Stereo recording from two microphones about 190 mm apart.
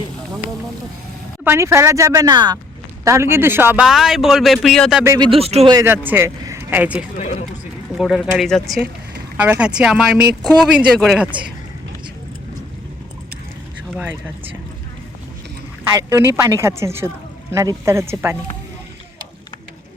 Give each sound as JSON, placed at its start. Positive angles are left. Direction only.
{"t": 1.5, "sound": "a woman's voice", "side_deg": -15}
{"t": 5.0, "sound": "speech", "side_deg": -20}
{"t": 5.7, "sound": "a woman's voice", "side_deg": -15}
{"t": 7.2, "sound": "speech", "side_deg": 35}
{"t": 7.9, "sound": "a man's voice", "side_deg": 0}
{"t": 16.0, "sound": "a woman's voice", "side_deg": -15}